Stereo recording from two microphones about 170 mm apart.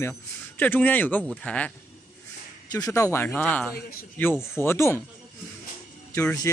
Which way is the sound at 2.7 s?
20° left (ahead or behind).